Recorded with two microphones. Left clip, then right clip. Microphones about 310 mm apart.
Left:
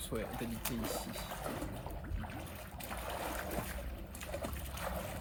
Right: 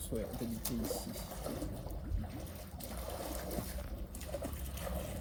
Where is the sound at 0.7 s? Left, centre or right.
Centre.